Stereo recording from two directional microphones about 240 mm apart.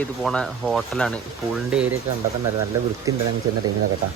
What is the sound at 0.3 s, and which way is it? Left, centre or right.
Speech, centre.